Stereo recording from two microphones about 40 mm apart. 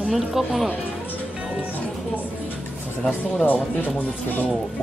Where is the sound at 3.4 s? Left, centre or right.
Left.